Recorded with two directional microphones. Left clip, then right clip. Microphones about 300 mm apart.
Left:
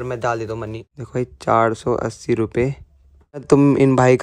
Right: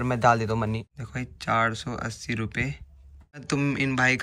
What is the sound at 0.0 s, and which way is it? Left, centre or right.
Speech, centre.